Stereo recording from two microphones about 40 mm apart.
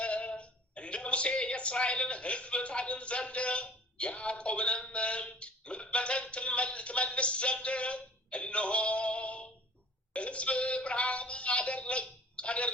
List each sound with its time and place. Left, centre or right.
0.0 s speech: left